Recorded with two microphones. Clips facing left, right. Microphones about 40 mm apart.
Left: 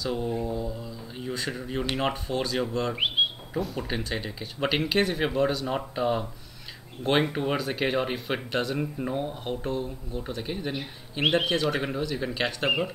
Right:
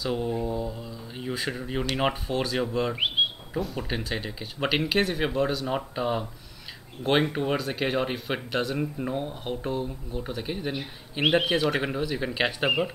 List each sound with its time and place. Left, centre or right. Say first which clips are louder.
0.0 s mantra: right 1 dB; centre
0.3 s a sound: right 1 dB; centre
2.0 s speech: right 3 dB; centre
12.6 s speech: even; centre